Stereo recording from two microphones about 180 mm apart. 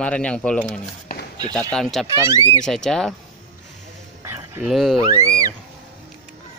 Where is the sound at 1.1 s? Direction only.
55° left (ahead or behind).